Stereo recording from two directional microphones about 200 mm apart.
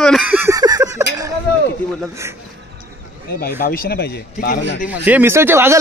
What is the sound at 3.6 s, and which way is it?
Speech, 50° left (ahead or behind).